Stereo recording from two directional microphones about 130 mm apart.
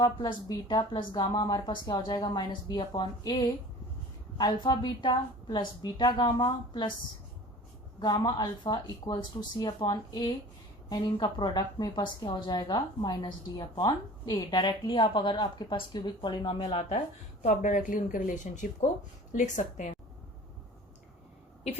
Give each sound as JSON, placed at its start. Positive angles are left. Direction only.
{"t": 0.0, "sound": "a woman's voice", "side_deg": 35}
{"t": 7.9, "sound": "a woman's voice", "side_deg": 30}
{"t": 17.4, "sound": "a woman's voice", "side_deg": 75}